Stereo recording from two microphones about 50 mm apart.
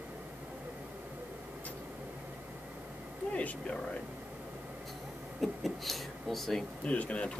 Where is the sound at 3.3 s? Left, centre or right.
Left.